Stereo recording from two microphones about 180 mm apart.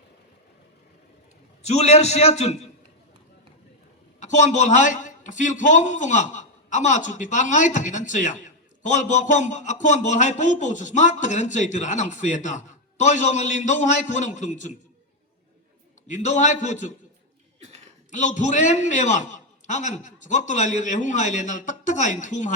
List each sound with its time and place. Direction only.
1.6 s a man's voice: 35° left (ahead or behind)
4.2 s a man's voice: 40° left (ahead or behind)
16.0 s a man's voice: 45° left (ahead or behind)
18.1 s a man's voice: 45° left (ahead or behind)